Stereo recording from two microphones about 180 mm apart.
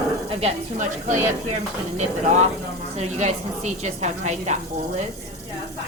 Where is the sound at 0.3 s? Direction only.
35° right (ahead or behind).